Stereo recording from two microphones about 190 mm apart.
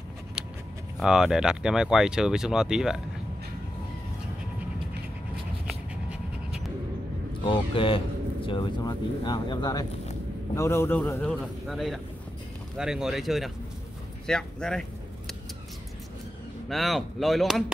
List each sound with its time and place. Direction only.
0.9 s speech: 5° right (ahead or behind)
7.4 s speech: 25° left (ahead or behind); by 14.9 s 5° left (ahead or behind)
16.6 s speech: centre (ahead or behind)